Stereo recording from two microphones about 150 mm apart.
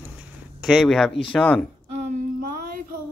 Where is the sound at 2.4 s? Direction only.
85° right.